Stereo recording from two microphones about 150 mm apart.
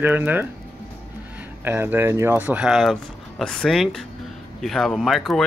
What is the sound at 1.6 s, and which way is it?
Speech, 15° right (ahead or behind).